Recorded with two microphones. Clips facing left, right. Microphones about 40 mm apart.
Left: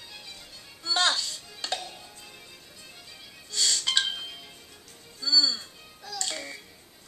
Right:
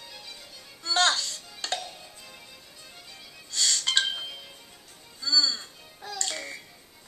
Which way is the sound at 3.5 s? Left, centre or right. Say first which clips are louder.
Right 1 dB; centre.